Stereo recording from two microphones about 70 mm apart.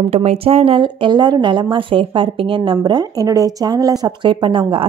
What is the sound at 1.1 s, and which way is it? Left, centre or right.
Speech, right.